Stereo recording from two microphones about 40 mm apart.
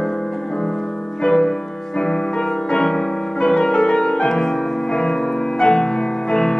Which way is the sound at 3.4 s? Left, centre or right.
Centre.